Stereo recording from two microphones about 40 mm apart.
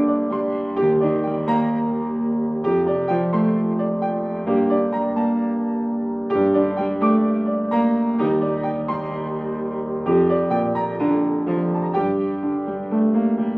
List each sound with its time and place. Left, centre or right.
0.7 s music: centre
2.7 s music: centre
10.0 s music: centre